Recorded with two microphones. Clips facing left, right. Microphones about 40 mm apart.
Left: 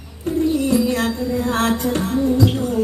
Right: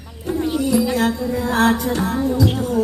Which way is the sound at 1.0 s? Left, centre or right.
Right.